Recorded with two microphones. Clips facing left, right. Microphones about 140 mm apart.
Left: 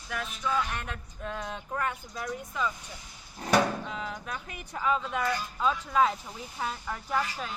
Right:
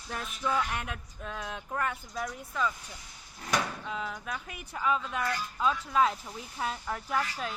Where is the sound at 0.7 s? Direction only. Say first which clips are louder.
Right 1 dB; 10° right (ahead or behind).